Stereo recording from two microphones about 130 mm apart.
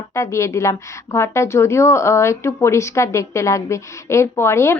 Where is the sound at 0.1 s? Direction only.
20° left (ahead or behind).